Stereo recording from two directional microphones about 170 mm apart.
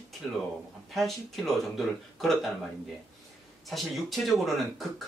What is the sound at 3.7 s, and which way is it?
Speech, centre (ahead or behind).